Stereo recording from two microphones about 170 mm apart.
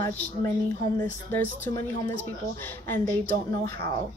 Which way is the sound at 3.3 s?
60° right (ahead or behind).